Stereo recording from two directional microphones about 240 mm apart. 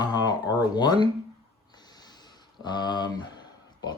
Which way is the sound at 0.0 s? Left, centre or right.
Centre.